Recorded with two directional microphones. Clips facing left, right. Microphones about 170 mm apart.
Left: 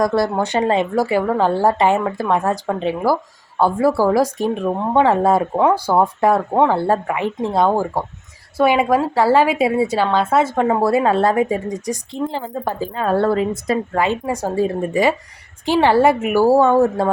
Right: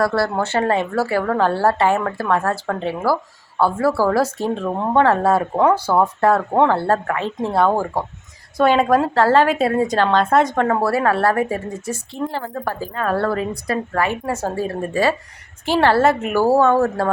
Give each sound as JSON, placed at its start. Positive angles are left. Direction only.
{"t": 0.0, "sound": "speech", "side_deg": 15}
{"t": 6.5, "sound": "speech", "side_deg": 5}
{"t": 6.7, "sound": "speech", "side_deg": 15}
{"t": 10.7, "sound": "speech", "side_deg": 15}